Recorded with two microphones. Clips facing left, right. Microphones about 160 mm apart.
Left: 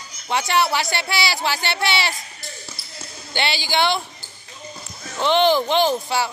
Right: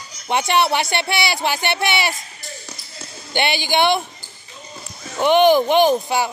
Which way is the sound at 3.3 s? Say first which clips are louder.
Right 3 dB; 20° right (ahead or behind).